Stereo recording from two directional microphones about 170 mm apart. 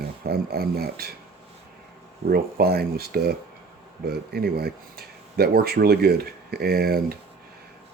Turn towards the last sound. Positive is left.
turn(degrees=-60)  # may be behind; listen again after turning